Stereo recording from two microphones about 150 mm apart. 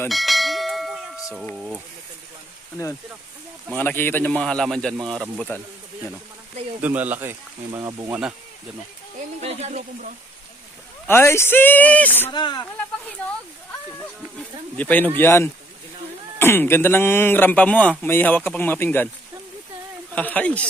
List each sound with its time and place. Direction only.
0.1 s bell: centre (ahead or behind)
1.5 s speech: 10° right (ahead or behind)
3.8 s speech: 15° left (ahead or behind)
6.8 s speech: 10° right (ahead or behind)
9.4 s speech: 45° right (ahead or behind)
11.0 s speech: 15° left (ahead or behind)
12.3 s speech: 30° left (ahead or behind)
14.3 s speech: 10° left (ahead or behind)
20.1 s speech: 10° left (ahead or behind)